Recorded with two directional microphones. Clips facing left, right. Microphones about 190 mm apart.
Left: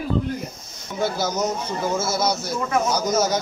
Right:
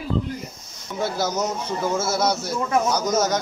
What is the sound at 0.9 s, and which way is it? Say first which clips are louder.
Speech: left 1 dB; centre (ahead or behind).